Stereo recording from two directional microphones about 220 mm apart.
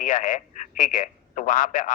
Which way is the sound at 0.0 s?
35° left (ahead or behind).